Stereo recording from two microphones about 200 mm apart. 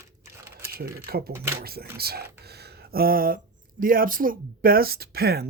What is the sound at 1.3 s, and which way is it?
Speech, 10° right (ahead or behind).